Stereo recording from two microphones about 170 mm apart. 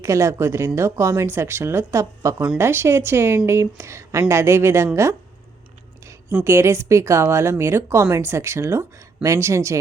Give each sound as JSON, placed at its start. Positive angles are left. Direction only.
{"t": 0.0, "sound": "speech", "side_deg": -15}
{"t": 6.4, "sound": "speech", "side_deg": -15}